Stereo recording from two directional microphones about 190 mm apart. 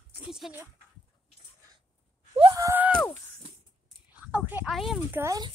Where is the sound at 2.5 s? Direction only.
15° right (ahead or behind).